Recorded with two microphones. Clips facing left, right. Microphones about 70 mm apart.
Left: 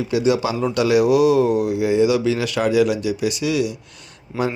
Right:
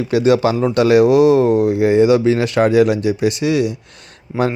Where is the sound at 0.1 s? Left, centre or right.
Right.